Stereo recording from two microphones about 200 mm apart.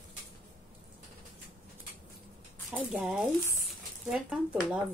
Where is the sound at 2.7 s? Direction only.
Centre (ahead or behind).